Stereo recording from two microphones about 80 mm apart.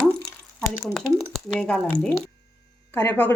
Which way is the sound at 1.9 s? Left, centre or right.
Left.